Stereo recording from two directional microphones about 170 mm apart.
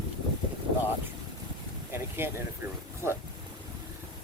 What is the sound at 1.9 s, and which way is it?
Speech, 15° right (ahead or behind).